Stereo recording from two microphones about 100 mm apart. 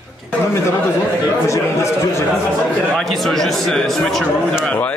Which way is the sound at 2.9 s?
Centre (ahead or behind).